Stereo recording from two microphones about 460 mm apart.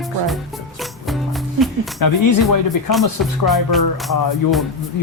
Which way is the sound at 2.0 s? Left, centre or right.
Left.